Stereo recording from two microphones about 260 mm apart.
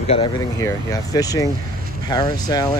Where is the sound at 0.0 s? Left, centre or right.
Left.